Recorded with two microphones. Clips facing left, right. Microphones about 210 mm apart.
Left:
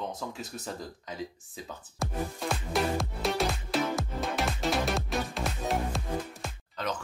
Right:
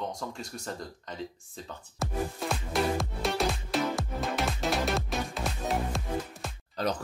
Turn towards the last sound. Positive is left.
turn(degrees=-35)  # may be behind; listen again after turning